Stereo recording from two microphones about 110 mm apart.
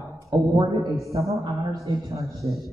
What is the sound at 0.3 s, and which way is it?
Speech, 45° right (ahead or behind).